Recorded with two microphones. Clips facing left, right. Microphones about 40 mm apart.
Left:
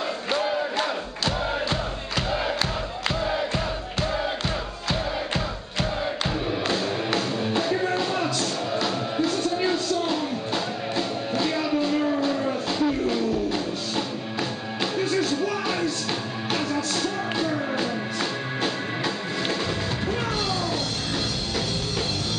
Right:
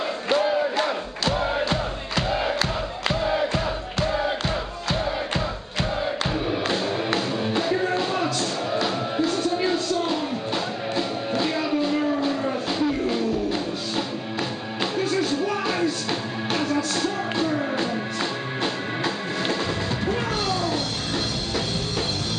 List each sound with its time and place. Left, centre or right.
0.3 s crowd: centre
6.7 s music: centre